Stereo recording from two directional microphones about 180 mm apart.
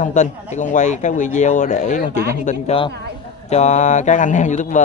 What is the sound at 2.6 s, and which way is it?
A man's voice, 30° left (ahead or behind).